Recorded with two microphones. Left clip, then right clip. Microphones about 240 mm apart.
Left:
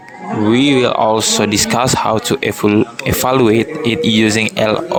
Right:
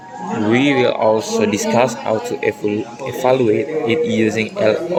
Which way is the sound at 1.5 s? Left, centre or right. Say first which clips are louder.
Left 2 dB; left.